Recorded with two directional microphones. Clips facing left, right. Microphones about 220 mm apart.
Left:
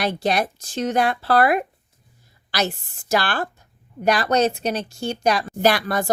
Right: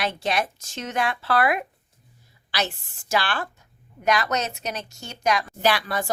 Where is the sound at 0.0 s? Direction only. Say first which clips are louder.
Left 4 dB; 35° left (ahead or behind).